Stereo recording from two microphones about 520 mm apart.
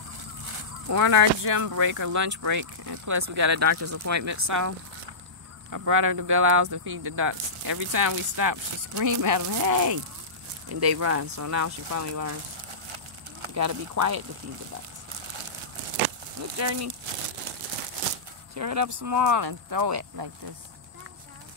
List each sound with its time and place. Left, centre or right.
0.8 s speech: right
13.6 s speech: right
16.5 s speech: right
18.5 s speech: right